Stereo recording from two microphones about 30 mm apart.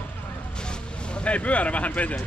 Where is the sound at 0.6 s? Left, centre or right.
Left.